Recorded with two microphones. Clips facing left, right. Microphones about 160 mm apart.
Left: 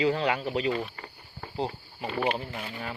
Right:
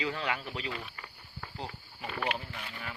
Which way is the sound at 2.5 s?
45° left (ahead or behind).